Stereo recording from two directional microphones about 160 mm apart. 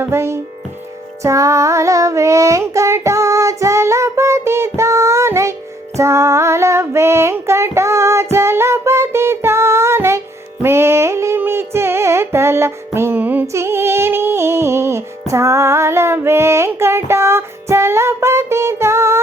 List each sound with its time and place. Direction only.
0.0 s speech: 15° right (ahead or behind)
1.2 s child singing: 20° right (ahead or behind)
6.0 s female singing: 15° right (ahead or behind)
10.6 s a sound: 15° right (ahead or behind)